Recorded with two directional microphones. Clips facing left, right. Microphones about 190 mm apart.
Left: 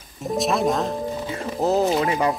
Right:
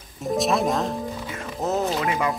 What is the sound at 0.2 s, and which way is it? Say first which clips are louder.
Speech: even; centre (ahead or behind).